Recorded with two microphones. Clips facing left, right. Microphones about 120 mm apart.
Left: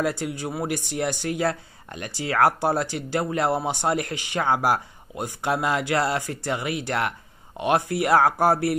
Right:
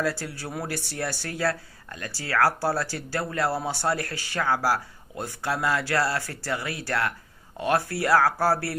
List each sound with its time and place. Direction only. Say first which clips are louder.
0.0 s speech: left 3 dB; 20° left (ahead or behind)